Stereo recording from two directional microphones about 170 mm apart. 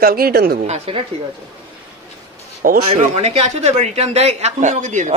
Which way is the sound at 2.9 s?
40° right (ahead or behind).